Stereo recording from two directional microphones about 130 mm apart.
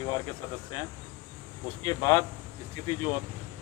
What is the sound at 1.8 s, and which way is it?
Speech, 35° left (ahead or behind).